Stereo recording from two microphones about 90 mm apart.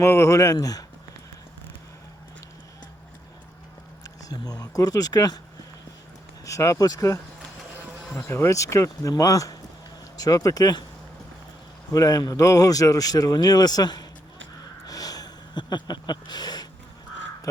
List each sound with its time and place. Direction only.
0.0 s speech: 35° left (ahead or behind)
4.0 s speech: 40° left (ahead or behind)
6.4 s speech: 35° left (ahead or behind)
8.2 s speech: 30° left (ahead or behind); by 10.8 s 45° left (ahead or behind)
11.9 s speech: 45° left (ahead or behind)
14.8 s a sound: 45° left (ahead or behind)